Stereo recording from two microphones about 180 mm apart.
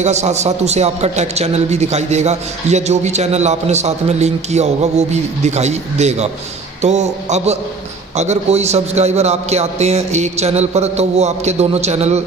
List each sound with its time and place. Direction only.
0.0 s a man's voice: 40° right (ahead or behind)